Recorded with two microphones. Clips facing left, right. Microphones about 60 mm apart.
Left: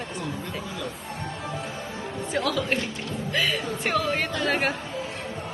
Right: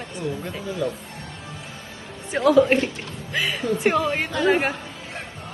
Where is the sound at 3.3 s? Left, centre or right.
Centre.